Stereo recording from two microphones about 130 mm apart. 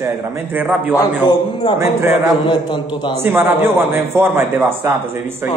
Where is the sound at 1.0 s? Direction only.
35° left (ahead or behind).